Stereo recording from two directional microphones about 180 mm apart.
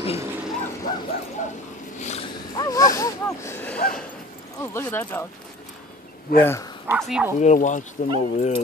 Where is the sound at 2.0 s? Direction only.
40° left (ahead or behind).